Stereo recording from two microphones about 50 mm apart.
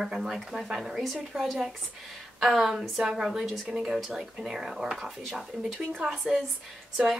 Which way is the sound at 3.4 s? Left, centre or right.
Centre.